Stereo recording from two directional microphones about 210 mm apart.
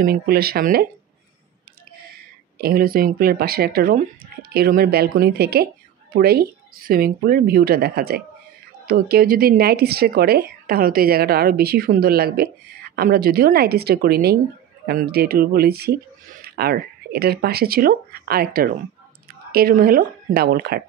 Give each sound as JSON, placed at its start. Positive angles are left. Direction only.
{"t": 0.0, "sound": "speech", "side_deg": -45}
{"t": 2.6, "sound": "speech", "side_deg": -45}